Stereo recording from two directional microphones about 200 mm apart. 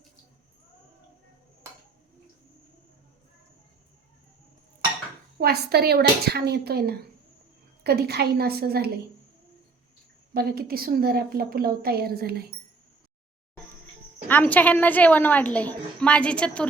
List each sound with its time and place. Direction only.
5.4 s a woman's voice: 50° right (ahead or behind)
10.3 s a woman's voice: 50° right (ahead or behind)
14.3 s a woman's voice: 10° left (ahead or behind)